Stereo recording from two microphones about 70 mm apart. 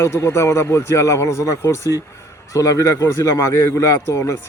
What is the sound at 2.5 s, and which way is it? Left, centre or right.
Speech, left.